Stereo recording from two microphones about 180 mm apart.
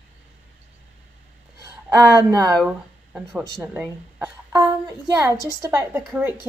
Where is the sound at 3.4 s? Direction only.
15° right (ahead or behind).